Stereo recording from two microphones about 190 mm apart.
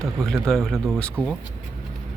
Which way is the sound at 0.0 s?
Centre (ahead or behind).